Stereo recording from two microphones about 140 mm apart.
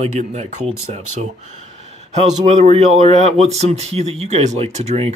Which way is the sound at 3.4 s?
50° right (ahead or behind).